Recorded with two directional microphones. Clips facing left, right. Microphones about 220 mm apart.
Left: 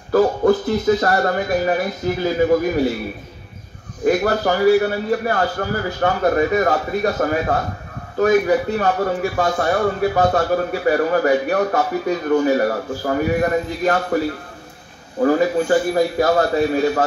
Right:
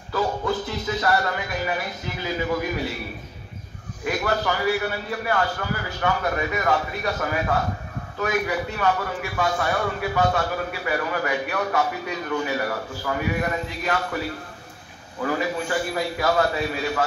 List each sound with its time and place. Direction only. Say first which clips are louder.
0.1 s speech: left 10 dB; 50° left (ahead or behind)
4.0 s speech: left 8 dB; 40° left (ahead or behind)